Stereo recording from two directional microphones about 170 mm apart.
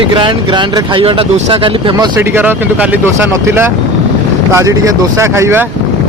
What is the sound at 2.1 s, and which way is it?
Speech, 10° right (ahead or behind).